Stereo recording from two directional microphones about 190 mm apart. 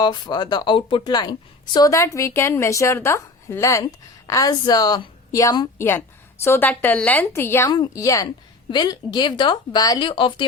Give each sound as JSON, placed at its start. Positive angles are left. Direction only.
{"t": 0.0, "sound": "a woman's voice", "side_deg": 20}